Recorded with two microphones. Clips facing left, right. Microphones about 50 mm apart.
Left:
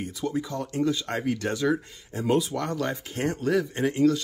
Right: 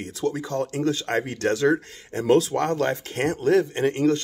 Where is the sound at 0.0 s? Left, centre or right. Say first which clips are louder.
Right 2 dB; right.